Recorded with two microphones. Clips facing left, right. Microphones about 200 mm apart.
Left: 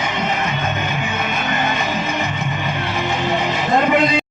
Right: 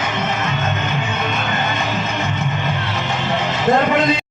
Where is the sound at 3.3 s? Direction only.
15° left (ahead or behind).